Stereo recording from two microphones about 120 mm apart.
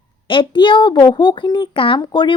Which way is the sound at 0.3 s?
40° left (ahead or behind).